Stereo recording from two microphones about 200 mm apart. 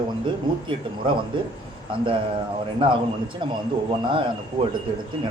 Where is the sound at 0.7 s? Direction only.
25° right (ahead or behind).